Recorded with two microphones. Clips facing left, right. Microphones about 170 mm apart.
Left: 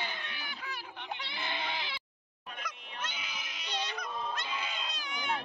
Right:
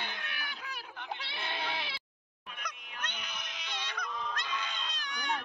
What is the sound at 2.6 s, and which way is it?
Goose, 5° left (ahead or behind).